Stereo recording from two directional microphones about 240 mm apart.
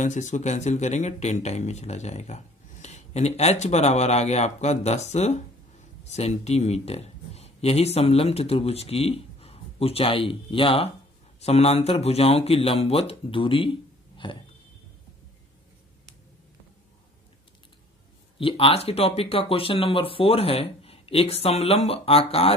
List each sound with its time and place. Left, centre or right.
0.0 s speech: left
18.4 s speech: left